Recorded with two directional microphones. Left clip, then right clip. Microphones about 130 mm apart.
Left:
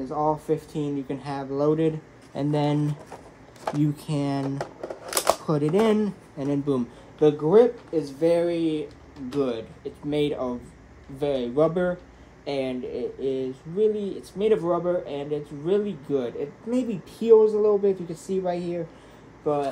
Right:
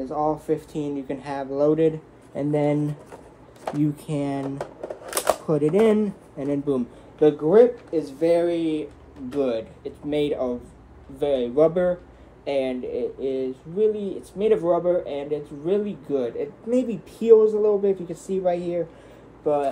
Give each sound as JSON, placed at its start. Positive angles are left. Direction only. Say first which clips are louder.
{"t": 0.0, "sound": "speech", "louder": "right 1 dB", "side_deg": 5}
{"t": 2.3, "sound": "speech", "louder": "right 3 dB", "side_deg": 20}
{"t": 3.6, "sound": "speech", "louder": "right 1 dB", "side_deg": 5}